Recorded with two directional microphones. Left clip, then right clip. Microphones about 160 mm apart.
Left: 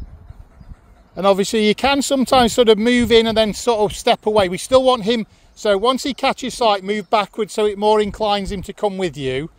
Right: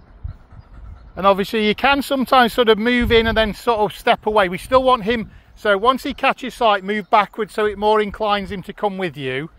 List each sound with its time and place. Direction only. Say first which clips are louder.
1.1 s speech: even; 35° left (ahead or behind)